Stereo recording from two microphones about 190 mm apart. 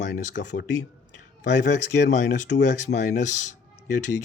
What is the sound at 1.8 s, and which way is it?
Speech, 40° left (ahead or behind).